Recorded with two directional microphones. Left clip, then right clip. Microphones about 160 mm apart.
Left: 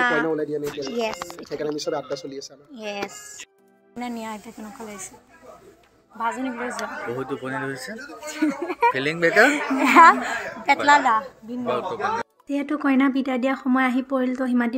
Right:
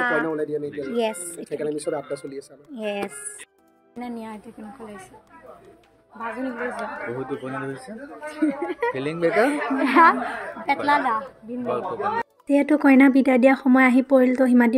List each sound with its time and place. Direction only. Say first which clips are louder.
0.0 s speech: left 1 dB; 30° left (ahead or behind)
0.3 s speech: left 1 dB; 60° left (ahead or behind)
0.7 s speech: right 5 dB; 35° right (ahead or behind)
1.6 s speech: left 1 dB; 5° left (ahead or behind)
2.7 s speech: right 3 dB; 60° right (ahead or behind)
4.0 s speech: left 3 dB; 15° left (ahead or behind)
6.1 s speech: left 4 dB; 25° left (ahead or behind)
6.8 s speech: left 1 dB; centre (ahead or behind)
9.3 s speech: left 4 dB; 25° left (ahead or behind)
11.6 s speech: left 1 dB; centre (ahead or behind)
12.4 s speech: right 7 dB; 30° right (ahead or behind)